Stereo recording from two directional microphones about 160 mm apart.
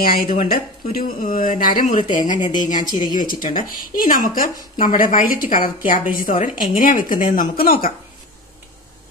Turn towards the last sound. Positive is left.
turn(degrees=60)  # may be behind; listen again after turning